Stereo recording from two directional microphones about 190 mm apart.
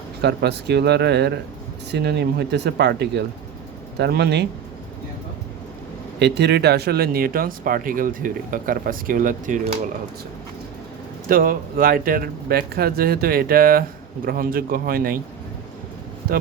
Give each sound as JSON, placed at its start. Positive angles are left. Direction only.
{"t": 0.2, "sound": "speech", "side_deg": -60}
{"t": 6.1, "sound": "speech", "side_deg": -60}
{"t": 11.3, "sound": "speech", "side_deg": -50}